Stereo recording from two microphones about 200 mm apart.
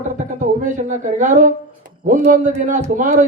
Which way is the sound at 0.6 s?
40° right (ahead or behind).